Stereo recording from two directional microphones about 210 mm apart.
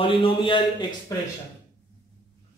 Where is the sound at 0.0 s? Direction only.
25° left (ahead or behind).